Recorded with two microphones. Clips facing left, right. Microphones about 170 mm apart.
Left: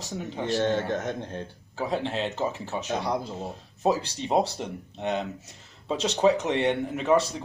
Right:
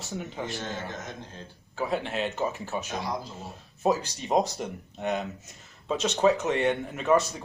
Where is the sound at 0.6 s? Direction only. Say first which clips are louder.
Left 10 dB; 65° left (ahead or behind).